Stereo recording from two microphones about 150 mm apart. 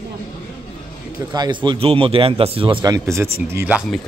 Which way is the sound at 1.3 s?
30° right (ahead or behind).